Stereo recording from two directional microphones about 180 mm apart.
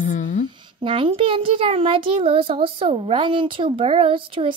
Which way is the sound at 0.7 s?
30° right (ahead or behind).